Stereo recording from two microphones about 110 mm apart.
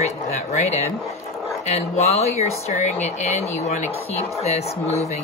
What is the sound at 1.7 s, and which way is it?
Speech, 75° left (ahead or behind).